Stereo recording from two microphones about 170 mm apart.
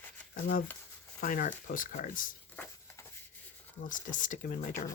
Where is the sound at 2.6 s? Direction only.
10° left (ahead or behind).